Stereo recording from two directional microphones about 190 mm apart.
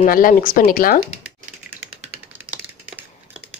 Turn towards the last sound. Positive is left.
turn(degrees=-10)  # may be behind; listen again after turning